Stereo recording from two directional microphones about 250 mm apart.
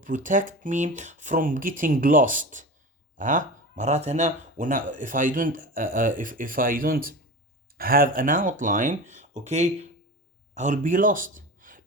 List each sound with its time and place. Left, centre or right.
0.0 s speech: right